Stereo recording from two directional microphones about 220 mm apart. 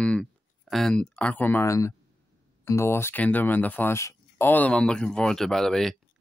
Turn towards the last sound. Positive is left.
turn(degrees=0)  # may be behind; listen again after turning